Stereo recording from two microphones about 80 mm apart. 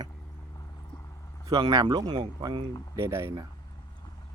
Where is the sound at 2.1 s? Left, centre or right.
Right.